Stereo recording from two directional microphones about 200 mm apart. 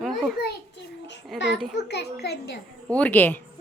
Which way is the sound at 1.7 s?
60° left (ahead or behind).